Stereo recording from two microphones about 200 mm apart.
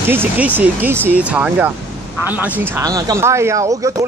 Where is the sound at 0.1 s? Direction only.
10° right (ahead or behind).